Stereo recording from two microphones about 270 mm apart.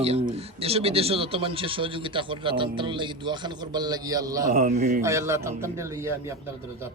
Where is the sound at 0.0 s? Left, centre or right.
Right.